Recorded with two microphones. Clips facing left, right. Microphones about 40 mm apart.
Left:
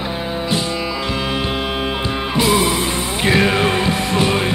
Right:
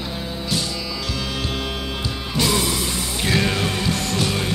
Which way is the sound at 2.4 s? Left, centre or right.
Left.